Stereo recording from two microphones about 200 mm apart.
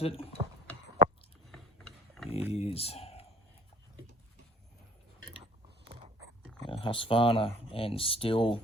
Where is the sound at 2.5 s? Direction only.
30° left (ahead or behind).